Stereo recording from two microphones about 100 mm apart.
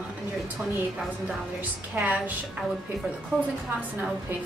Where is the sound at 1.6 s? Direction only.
15° right (ahead or behind).